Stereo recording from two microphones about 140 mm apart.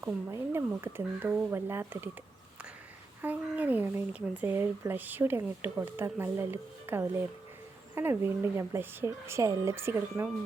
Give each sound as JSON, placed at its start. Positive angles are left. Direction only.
{"t": 0.0, "sound": "speech", "side_deg": -20}
{"t": 3.2, "sound": "speech", "side_deg": -10}